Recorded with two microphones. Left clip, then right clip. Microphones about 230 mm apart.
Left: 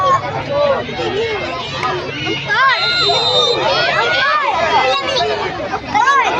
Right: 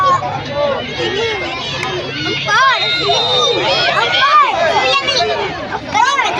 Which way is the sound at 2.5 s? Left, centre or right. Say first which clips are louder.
Right 1 dB; right.